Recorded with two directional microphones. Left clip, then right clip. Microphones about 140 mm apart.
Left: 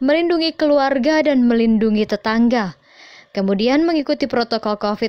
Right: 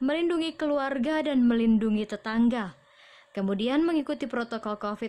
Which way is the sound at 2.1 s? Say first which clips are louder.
Left 11 dB; 45° left (ahead or behind).